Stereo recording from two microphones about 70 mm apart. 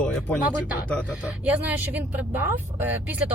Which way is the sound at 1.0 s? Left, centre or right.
Right.